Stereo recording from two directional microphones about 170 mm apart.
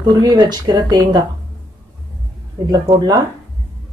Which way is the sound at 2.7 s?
25° right (ahead or behind).